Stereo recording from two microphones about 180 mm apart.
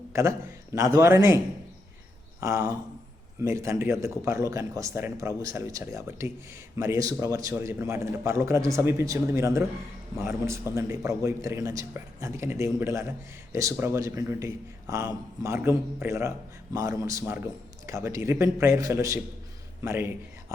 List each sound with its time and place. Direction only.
0.1 s a man's voice: 15° right (ahead or behind)
2.4 s speech: 15° right (ahead or behind)